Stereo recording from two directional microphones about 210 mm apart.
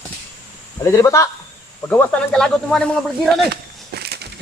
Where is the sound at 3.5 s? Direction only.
50° right (ahead or behind).